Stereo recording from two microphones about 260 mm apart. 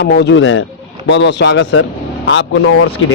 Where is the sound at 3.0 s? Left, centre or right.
Left.